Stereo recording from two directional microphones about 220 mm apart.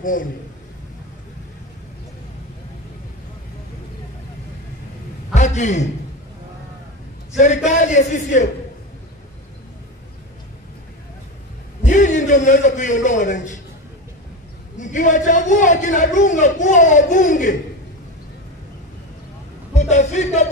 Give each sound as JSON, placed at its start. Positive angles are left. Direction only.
{"t": 0.0, "sound": "a man's voice", "side_deg": 40}
{"t": 5.3, "sound": "a man's voice", "side_deg": 35}
{"t": 7.3, "sound": "a man's voice", "side_deg": 35}
{"t": 11.8, "sound": "a man's voice", "side_deg": 35}
{"t": 14.8, "sound": "a man's voice", "side_deg": 35}
{"t": 19.7, "sound": "speech", "side_deg": 30}